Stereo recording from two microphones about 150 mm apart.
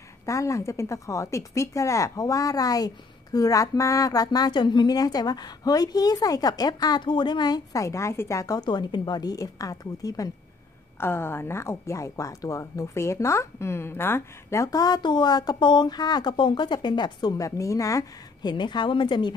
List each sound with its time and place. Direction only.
0.2 s speech: 20° left (ahead or behind)